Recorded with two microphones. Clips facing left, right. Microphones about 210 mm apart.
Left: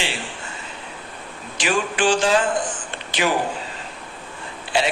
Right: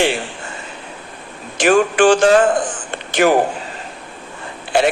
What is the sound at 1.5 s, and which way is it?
A man's voice, 50° right (ahead or behind).